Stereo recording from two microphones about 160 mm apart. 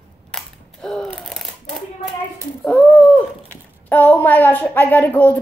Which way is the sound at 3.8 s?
10° left (ahead or behind).